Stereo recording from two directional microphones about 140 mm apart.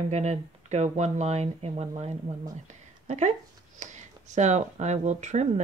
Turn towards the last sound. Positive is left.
turn(degrees=-55)  # may be behind; listen again after turning